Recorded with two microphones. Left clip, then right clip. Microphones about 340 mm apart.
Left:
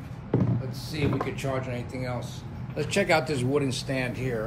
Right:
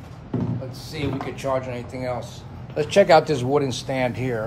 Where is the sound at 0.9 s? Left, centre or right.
Right.